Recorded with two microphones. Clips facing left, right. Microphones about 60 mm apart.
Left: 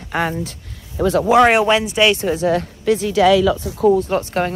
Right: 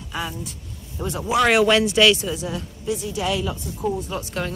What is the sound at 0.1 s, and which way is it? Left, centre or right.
Speech, left.